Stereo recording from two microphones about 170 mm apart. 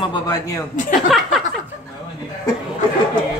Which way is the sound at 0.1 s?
20° left (ahead or behind).